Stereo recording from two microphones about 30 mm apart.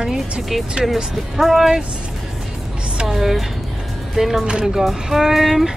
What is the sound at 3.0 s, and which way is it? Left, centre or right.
Speech, centre.